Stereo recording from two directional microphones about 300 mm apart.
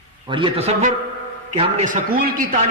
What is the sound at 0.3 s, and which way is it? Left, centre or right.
A man's voice, centre.